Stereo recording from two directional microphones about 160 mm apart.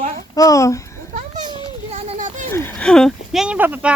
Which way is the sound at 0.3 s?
20° left (ahead or behind).